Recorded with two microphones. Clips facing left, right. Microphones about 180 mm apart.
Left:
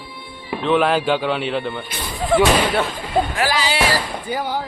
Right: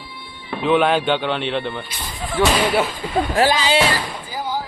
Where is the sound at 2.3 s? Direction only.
65° left (ahead or behind).